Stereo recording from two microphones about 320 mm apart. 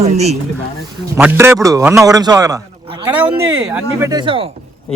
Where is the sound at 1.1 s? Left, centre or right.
Centre.